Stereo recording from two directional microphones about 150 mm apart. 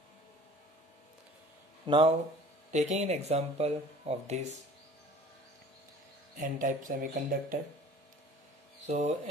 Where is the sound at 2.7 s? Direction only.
50° right (ahead or behind).